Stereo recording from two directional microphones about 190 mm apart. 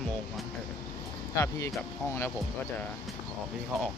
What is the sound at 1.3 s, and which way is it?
Speech, 15° left (ahead or behind).